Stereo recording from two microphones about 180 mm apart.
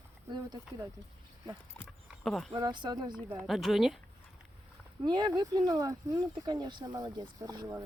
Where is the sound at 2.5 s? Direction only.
25° right (ahead or behind).